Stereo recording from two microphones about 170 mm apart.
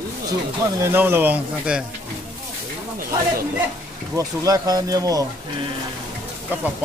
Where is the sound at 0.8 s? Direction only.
10° right (ahead or behind).